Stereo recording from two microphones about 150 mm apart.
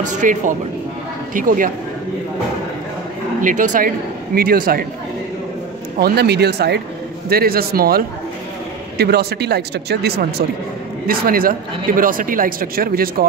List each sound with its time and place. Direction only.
0.2 s speech: 60° right (ahead or behind)
3.3 s speech: 60° right (ahead or behind)
4.4 s speech: 75° right (ahead or behind)
5.9 s speech: 90° right
11.1 s speech: 75° right (ahead or behind)